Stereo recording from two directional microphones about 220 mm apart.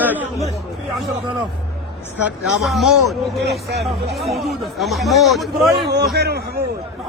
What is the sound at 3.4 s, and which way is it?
Speech, 50° right (ahead or behind).